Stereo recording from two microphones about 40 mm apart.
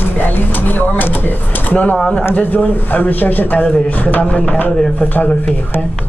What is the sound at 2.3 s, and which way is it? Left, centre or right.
A man's voice, left.